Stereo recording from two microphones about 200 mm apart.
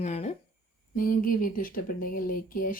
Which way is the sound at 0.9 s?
45° left (ahead or behind).